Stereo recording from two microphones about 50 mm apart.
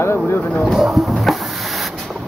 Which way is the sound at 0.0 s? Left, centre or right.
Left.